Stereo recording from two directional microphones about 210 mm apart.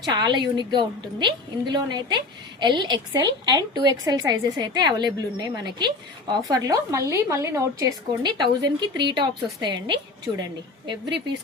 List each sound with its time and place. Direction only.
0.0 s a woman's voice: 20° right (ahead or behind)